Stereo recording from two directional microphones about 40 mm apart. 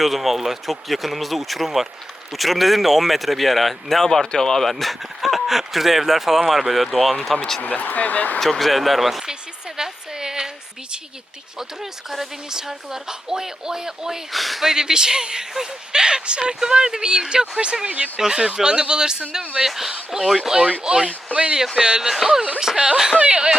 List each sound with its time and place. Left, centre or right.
0.0 s speech: centre
4.7 s speech: centre
7.6 s speech: left
8.4 s speech: centre
9.2 s a sound: centre
11.8 s speech: centre
14.3 s speech: centre
14.7 s speech: centre
18.2 s speech: centre
19.6 s speech: centre
20.8 s speech: centre
21.3 s speech: right
22.0 s speech: centre
23.1 s speech: right